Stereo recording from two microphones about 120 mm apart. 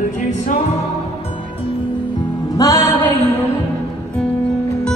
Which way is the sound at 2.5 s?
30° left (ahead or behind).